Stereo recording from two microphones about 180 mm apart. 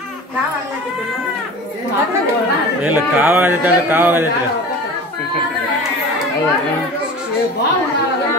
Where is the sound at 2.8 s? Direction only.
10° right (ahead or behind).